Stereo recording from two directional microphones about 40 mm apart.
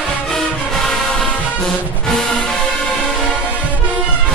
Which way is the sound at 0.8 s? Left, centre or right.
Centre.